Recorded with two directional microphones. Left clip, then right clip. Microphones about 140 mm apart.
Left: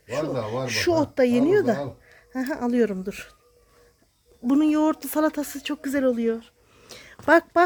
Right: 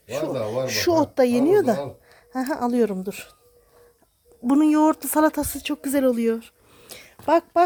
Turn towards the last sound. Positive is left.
turn(degrees=15)  # may be behind; listen again after turning